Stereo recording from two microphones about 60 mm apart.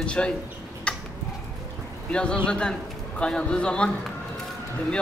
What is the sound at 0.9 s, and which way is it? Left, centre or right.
Tick-tock, centre.